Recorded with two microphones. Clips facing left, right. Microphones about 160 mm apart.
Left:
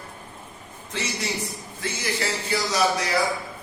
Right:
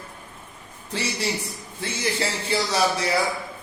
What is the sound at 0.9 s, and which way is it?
Speech, 35° right (ahead or behind).